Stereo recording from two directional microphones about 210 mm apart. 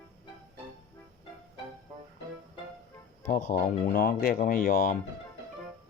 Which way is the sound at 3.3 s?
40° left (ahead or behind).